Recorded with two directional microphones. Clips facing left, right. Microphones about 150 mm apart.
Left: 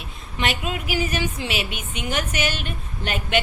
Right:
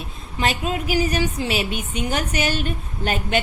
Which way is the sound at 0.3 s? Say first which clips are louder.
Right 3 dB; 35° right (ahead or behind).